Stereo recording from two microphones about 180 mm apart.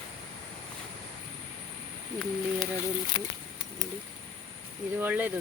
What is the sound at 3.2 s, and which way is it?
Speech, 25° left (ahead or behind).